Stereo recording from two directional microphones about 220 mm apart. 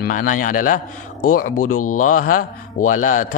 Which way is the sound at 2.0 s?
40° left (ahead or behind).